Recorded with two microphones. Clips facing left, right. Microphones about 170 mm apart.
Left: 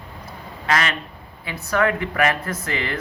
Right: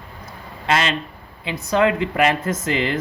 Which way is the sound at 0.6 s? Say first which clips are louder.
Right 2 dB; 25° right (ahead or behind).